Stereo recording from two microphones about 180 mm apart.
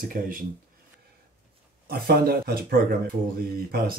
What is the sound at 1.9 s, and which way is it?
Speech, 60° right (ahead or behind).